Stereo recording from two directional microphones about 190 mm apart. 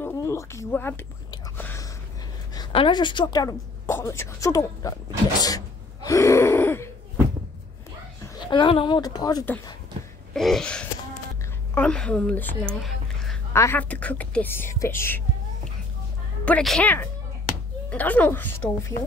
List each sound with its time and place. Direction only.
0.0 s speech: 15° left (ahead or behind)
1.6 s a sound: 10° left (ahead or behind)
2.5 s a woman's voice: 25° left (ahead or behind)
5.4 s gasp: 20° left (ahead or behind)
8.4 s a woman's voice: 25° left (ahead or behind)
10.3 s sneeze: centre (ahead or behind)
11.7 s speech: 5° left (ahead or behind)
13.5 s speech: 15° left (ahead or behind)
16.4 s speech: 5° left (ahead or behind)